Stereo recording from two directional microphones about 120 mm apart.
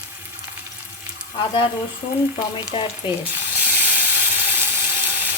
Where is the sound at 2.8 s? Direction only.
50° left (ahead or behind).